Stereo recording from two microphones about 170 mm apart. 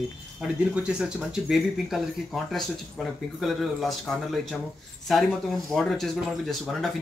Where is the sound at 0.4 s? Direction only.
5° right (ahead or behind).